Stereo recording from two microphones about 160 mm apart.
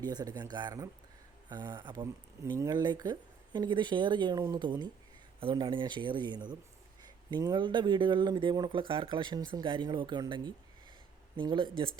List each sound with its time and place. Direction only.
0.0 s speech: 25° right (ahead or behind)